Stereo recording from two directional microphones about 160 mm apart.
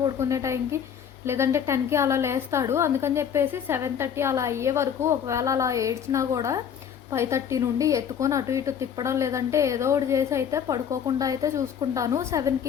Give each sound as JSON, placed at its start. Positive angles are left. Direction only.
{"t": 0.0, "sound": "a woman's voice", "side_deg": -20}